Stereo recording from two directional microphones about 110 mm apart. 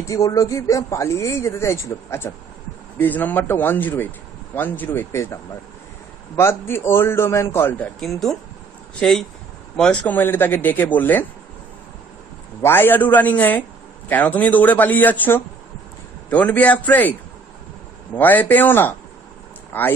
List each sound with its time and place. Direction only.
0.0 s a man's voice: 30° left (ahead or behind)
7.8 s speech: 5° left (ahead or behind)
9.8 s a man's voice: 5° left (ahead or behind)
10.1 s a man's voice: 20° left (ahead or behind)
12.6 s a man's voice: 20° left (ahead or behind)
18.1 s a man's voice: 15° left (ahead or behind)